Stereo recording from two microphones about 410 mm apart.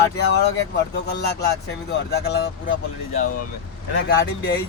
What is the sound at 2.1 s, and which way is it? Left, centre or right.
Speech, left.